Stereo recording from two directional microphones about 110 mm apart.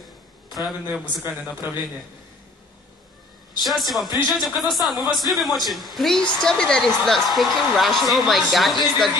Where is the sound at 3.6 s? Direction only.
Centre (ahead or behind).